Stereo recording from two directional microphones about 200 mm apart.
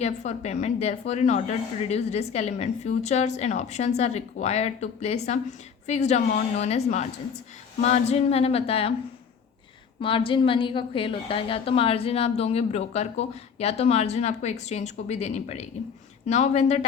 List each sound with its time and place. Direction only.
0.0 s a woman's voice: 35° left (ahead or behind)
10.0 s a woman's voice: 25° left (ahead or behind)